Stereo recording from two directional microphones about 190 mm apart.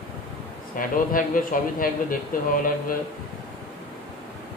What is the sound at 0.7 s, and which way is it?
Speech, 45° left (ahead or behind).